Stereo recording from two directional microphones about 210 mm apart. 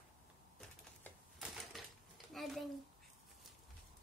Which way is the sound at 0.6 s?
Centre (ahead or behind).